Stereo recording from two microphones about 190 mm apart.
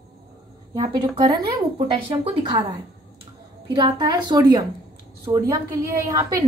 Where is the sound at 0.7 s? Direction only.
25° right (ahead or behind).